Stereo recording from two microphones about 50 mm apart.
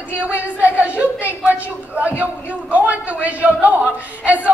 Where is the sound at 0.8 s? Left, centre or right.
Right.